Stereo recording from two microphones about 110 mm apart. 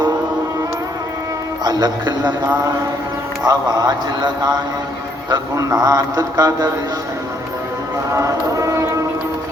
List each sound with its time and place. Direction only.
1.6 s speech: 35° right (ahead or behind)
3.4 s speech: 35° right (ahead or behind)
8.1 s a sound: 30° right (ahead or behind)